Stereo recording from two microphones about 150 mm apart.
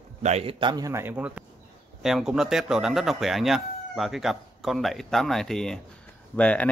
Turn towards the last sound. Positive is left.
turn(degrees=10)  # may be behind; listen again after turning